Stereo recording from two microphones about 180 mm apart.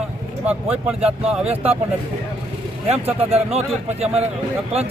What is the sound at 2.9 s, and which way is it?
Speech, 35° right (ahead or behind).